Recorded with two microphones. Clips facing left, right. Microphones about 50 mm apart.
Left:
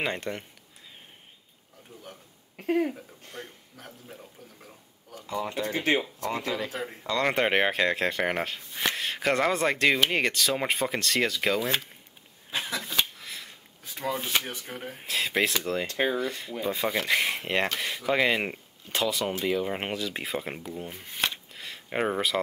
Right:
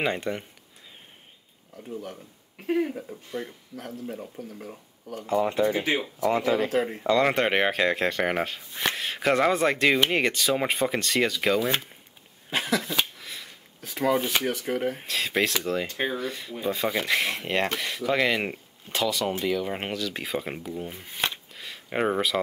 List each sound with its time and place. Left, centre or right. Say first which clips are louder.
0.0 s speech: right 3 dB; centre
3.7 s speech: right 12 dB; right
4.2 s speech: right 10 dB; right
5.6 s speech: right 3 dB; centre
6.2 s speech: right 7 dB; right
7.2 s speech: even; centre
12.4 s a sound: right 6 dB; right
12.8 s a sound: right 1 dB; centre
13.7 s a sound: right 7 dB; right
14.1 s speech: right 2 dB; centre
14.4 s speech: right 10 dB; right
15.0 s speech: left 5 dB; centre
19.9 s speech: right 1 dB; left
20.2 s speech: right 2 dB; centre